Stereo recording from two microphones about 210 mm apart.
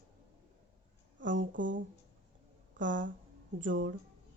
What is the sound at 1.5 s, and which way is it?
Speech, 60° right (ahead or behind).